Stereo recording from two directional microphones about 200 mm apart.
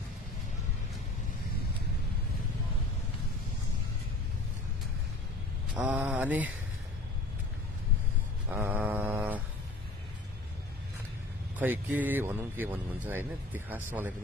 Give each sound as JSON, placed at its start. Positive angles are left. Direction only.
{"t": 5.8, "sound": "speech", "side_deg": -10}
{"t": 8.5, "sound": "mantra", "side_deg": -10}
{"t": 11.5, "sound": "speech", "side_deg": -10}